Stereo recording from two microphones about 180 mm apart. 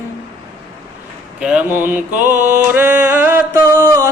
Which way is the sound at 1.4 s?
5° right (ahead or behind).